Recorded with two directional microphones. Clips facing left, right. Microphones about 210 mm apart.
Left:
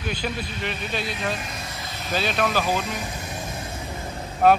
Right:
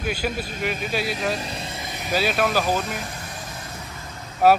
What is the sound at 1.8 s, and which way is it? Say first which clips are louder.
Speech: right 3 dB; 15° right (ahead or behind).